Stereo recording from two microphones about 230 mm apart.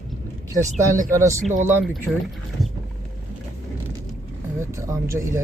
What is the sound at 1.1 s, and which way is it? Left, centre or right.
Speech, centre.